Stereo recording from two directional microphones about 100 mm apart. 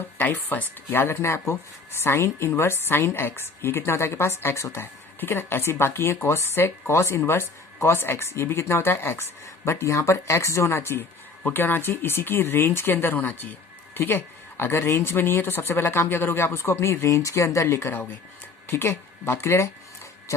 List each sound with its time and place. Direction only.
0.2 s speech: 20° left (ahead or behind)